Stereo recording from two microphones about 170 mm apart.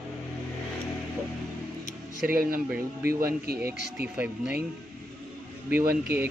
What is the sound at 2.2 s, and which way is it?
A man's voice, 60° right (ahead or behind).